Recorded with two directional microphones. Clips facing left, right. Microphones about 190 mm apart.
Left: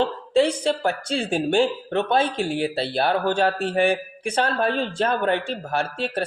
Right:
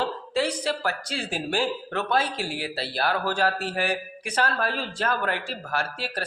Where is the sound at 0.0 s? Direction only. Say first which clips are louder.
Left 6 dB; 25° left (ahead or behind).